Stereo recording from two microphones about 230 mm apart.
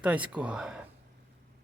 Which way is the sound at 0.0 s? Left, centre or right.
Centre.